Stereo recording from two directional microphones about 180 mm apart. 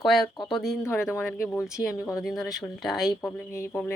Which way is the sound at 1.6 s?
5° right (ahead or behind).